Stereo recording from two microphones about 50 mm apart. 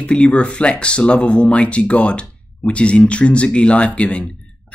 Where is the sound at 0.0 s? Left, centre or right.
Left.